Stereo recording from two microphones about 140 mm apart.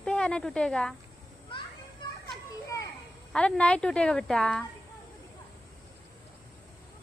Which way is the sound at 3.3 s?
5° left (ahead or behind).